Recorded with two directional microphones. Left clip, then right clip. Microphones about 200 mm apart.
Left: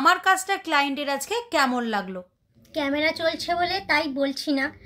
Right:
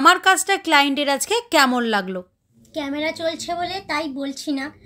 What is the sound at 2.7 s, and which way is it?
A woman's voice, 5° right (ahead or behind).